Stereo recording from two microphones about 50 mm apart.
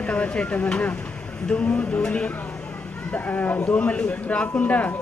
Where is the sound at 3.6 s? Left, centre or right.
Left.